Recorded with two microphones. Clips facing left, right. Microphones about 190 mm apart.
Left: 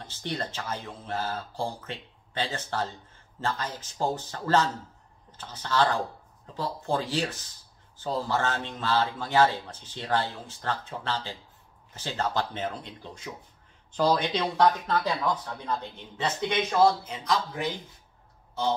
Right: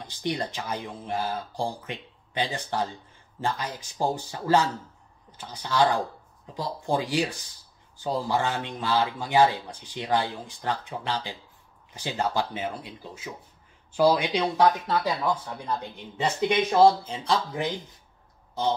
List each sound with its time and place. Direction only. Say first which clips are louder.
0.0 s speech: right 4 dB; 15° right (ahead or behind)
16.7 s speech: right 3 dB; 30° right (ahead or behind)